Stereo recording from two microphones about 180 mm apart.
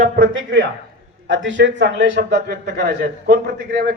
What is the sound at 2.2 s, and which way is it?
A man's voice, 70° right (ahead or behind).